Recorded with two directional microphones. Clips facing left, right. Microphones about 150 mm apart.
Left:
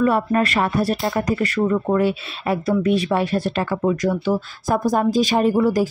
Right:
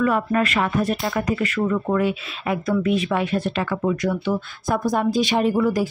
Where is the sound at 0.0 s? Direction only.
35° left (ahead or behind).